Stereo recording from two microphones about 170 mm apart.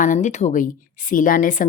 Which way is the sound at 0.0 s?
45° left (ahead or behind).